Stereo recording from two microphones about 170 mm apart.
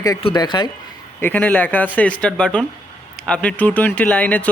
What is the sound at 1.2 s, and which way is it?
Speech, 10° left (ahead or behind).